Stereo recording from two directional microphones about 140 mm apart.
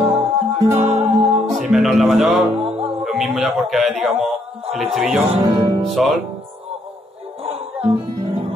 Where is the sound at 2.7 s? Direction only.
45° right (ahead or behind).